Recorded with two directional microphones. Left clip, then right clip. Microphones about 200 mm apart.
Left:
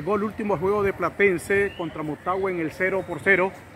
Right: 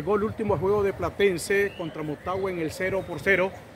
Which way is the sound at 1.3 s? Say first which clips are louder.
Left 2 dB; 20° left (ahead or behind).